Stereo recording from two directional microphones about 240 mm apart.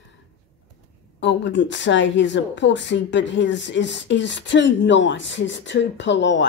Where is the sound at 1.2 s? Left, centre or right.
Left.